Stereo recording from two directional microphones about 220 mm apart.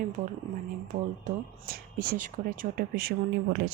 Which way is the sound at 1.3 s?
40° right (ahead or behind).